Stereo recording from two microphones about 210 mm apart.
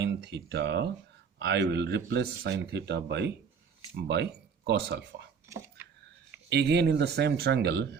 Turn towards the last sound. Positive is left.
turn(degrees=-50)  # may be behind; listen again after turning